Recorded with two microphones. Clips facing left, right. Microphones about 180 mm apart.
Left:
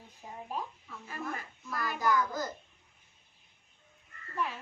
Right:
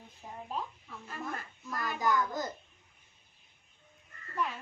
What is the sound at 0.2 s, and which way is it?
Speech, 10° left (ahead or behind).